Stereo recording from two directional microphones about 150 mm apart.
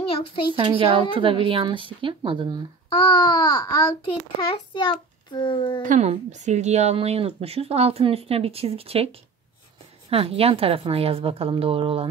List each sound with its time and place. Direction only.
0.1 s a woman's voice: 35° left (ahead or behind)
0.6 s a woman's voice: 35° right (ahead or behind)
3.0 s a child's voice: 30° left (ahead or behind)
5.8 s a woman's voice: 55° right (ahead or behind); by 12.1 s 40° right (ahead or behind)